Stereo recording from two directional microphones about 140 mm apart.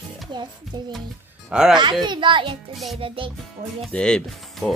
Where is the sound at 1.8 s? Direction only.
35° right (ahead or behind).